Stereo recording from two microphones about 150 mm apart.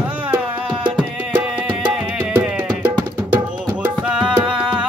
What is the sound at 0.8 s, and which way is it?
Music, 10° right (ahead or behind).